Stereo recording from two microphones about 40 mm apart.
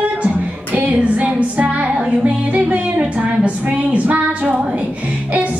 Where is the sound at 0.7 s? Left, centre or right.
Right.